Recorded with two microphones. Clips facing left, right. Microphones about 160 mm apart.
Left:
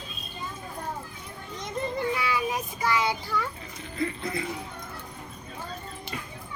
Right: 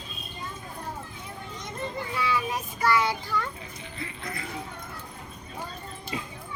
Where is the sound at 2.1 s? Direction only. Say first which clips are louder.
Even; 15° left (ahead or behind).